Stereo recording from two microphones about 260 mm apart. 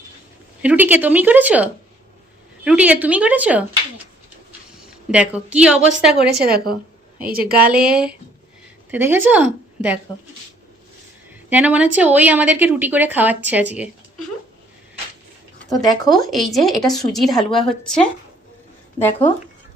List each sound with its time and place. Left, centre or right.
0.6 s a woman's voice: centre
5.1 s speech: centre
7.3 s a woman's voice: right
7.6 s a woman's voice: centre
11.4 s a woman's voice: centre
16.0 s speech: centre